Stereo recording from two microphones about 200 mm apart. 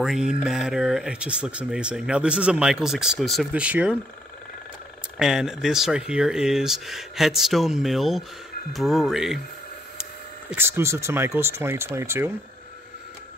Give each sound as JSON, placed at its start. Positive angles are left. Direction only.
{"t": 0.0, "sound": "speech", "side_deg": -5}
{"t": 5.2, "sound": "speech", "side_deg": -5}
{"t": 10.5, "sound": "speech", "side_deg": -10}